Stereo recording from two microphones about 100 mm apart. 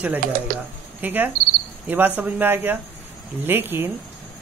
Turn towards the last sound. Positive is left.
turn(degrees=-20)  # may be behind; listen again after turning